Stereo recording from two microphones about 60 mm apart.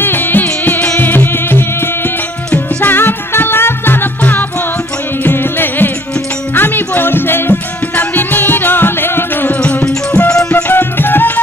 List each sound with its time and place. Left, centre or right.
0.0 s music: left
9.6 s music: left
10.5 s music: left